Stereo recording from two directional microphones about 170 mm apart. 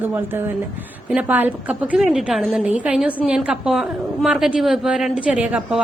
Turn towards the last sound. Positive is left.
turn(degrees=-5)  # may be behind; listen again after turning